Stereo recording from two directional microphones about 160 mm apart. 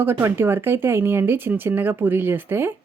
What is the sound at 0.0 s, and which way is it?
Speech, 15° right (ahead or behind).